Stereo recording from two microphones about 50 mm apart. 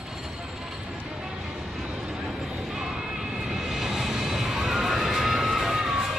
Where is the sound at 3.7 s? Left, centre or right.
Centre.